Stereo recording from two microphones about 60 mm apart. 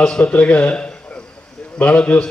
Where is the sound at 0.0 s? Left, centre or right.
Centre.